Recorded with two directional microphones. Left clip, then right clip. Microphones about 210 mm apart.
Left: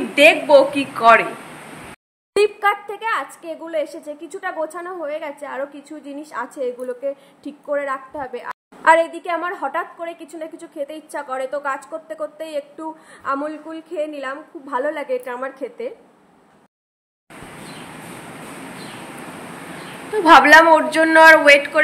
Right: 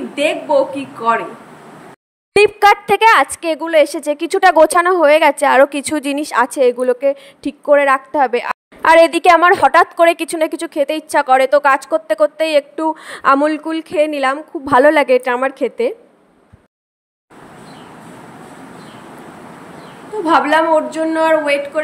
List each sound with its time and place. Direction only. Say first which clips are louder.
0.1 s a man's voice: left 4 dB; 10° right (ahead or behind)
2.3 s a woman's voice: right 7 dB; 45° right (ahead or behind)
20.2 s a man's voice: left 4 dB; 5° right (ahead or behind)